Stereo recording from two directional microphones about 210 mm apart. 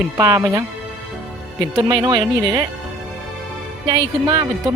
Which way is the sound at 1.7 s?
20° right (ahead or behind).